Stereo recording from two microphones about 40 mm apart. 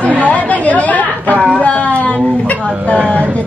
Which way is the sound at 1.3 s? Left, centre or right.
Right.